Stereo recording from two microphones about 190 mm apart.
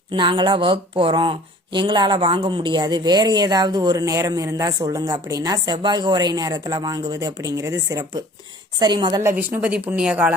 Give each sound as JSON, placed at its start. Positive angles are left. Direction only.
{"t": 0.1, "sound": "speech", "side_deg": -25}
{"t": 9.5, "sound": "speech", "side_deg": -5}